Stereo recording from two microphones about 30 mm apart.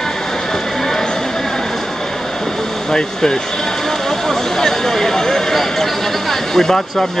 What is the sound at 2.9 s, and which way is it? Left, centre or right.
Speech, left.